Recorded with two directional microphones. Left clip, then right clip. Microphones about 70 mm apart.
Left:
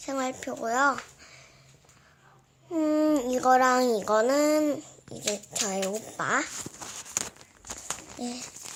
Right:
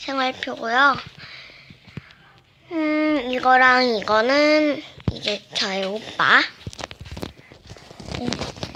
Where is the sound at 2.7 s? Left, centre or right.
Left.